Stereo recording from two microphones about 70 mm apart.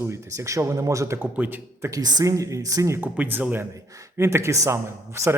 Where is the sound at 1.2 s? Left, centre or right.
Right.